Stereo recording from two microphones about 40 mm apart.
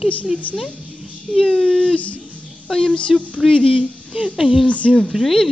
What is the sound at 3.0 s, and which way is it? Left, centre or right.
Speech, left.